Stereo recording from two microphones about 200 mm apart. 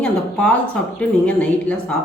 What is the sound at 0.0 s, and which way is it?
Speech, 5° left (ahead or behind).